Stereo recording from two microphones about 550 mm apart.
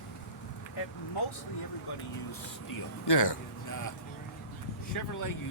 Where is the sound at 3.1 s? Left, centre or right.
Left.